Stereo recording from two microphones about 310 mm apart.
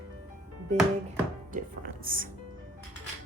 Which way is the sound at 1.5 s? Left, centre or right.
Right.